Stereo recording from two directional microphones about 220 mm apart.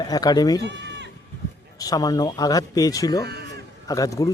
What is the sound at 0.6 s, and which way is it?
Bleat, 50° right (ahead or behind).